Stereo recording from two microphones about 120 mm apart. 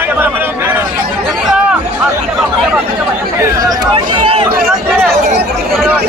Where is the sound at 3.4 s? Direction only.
30° right (ahead or behind).